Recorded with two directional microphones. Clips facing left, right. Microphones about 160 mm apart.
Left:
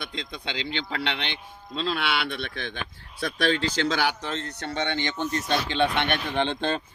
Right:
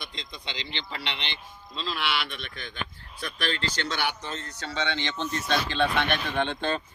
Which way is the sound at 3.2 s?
75° left (ahead or behind).